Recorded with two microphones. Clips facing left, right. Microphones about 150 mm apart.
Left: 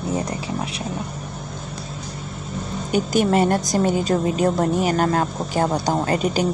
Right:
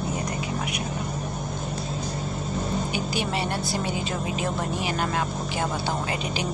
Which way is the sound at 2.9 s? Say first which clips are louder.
Left 9 dB; 45° left (ahead or behind).